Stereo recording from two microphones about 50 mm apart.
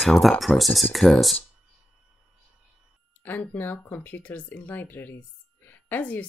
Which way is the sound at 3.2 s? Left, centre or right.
Left.